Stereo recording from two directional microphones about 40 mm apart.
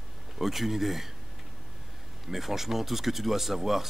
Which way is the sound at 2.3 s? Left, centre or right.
Centre.